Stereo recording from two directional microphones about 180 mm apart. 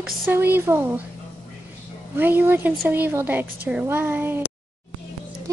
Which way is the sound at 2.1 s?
10° right (ahead or behind).